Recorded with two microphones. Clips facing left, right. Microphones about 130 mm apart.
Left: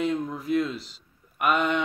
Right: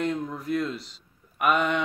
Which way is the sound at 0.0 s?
Centre (ahead or behind).